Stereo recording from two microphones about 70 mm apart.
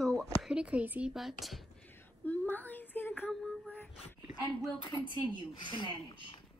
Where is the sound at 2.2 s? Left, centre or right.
Left.